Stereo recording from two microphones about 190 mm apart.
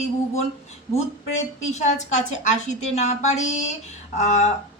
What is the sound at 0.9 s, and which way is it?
A woman's voice, 35° left (ahead or behind).